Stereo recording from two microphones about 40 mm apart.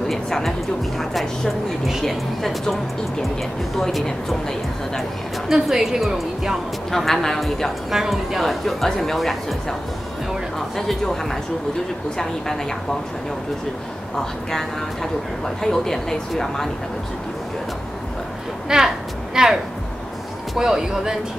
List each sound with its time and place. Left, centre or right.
0.1 s a woman's voice: centre
5.5 s a woman's voice: centre
6.9 s a woman's voice: centre
7.9 s a woman's voice: centre
10.8 s a woman's voice: centre
14.1 s a woman's voice: centre
18.7 s a sound: centre
20.5 s speech: centre